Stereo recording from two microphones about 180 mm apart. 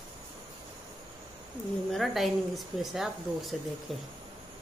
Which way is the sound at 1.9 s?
Centre (ahead or behind).